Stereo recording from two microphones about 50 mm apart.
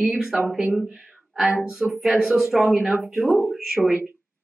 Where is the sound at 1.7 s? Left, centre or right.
Centre.